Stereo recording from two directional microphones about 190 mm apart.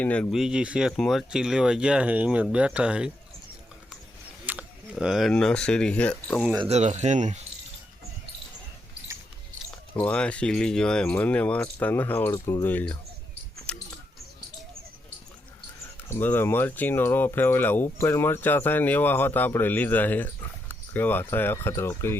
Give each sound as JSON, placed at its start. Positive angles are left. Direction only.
{"t": 0.0, "sound": "speech", "side_deg": 5}
{"t": 4.4, "sound": "speech", "side_deg": -5}
{"t": 6.6, "sound": "speech", "side_deg": -35}
{"t": 9.9, "sound": "speech", "side_deg": 5}
{"t": 13.7, "sound": "a sound", "side_deg": 5}
{"t": 16.0, "sound": "speech", "side_deg": 10}